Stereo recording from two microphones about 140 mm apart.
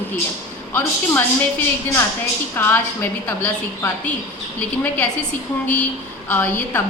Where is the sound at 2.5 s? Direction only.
15° left (ahead or behind).